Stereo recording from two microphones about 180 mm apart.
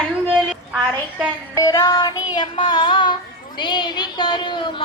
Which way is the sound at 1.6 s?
20° left (ahead or behind).